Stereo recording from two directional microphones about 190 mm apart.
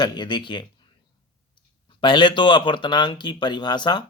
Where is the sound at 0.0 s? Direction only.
25° left (ahead or behind).